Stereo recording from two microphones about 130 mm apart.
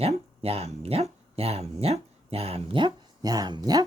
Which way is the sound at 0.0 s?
50° right (ahead or behind).